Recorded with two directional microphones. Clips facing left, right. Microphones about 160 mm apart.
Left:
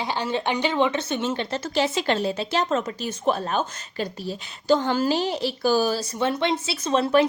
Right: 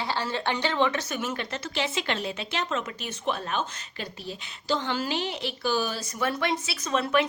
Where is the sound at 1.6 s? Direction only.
40° left (ahead or behind).